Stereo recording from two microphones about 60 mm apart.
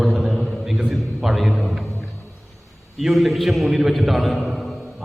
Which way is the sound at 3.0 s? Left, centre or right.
Centre.